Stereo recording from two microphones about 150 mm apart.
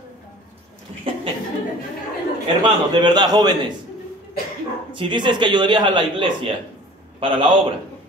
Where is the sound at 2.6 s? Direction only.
30° right (ahead or behind).